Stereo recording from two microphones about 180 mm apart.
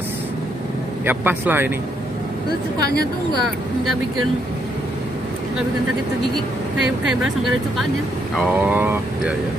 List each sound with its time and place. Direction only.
1.0 s speech: 10° right (ahead or behind)
2.8 s a woman's voice: 60° left (ahead or behind)
6.3 s speech: centre (ahead or behind)